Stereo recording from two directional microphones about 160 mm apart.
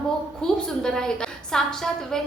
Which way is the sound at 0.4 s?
5° left (ahead or behind).